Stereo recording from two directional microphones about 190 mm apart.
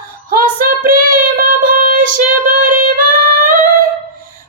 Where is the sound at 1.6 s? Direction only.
45° right (ahead or behind).